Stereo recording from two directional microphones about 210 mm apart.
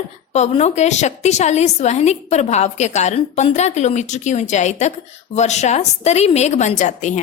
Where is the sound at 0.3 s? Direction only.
30° left (ahead or behind).